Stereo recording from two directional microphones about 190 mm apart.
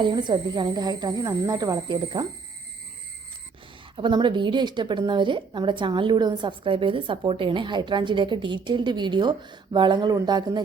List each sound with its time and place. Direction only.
0.0 s speech: 25° right (ahead or behind)
3.9 s speech: 25° right (ahead or behind)